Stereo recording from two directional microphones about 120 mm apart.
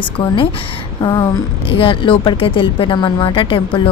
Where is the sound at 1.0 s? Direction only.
30° left (ahead or behind).